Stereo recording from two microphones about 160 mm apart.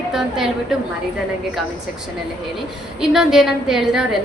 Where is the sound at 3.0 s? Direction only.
5° right (ahead or behind).